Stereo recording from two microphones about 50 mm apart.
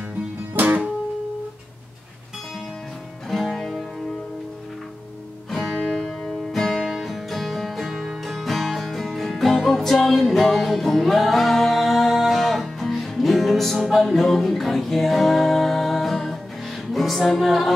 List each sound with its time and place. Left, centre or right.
0.6 s music: right
3.3 s music: centre
5.5 s music: centre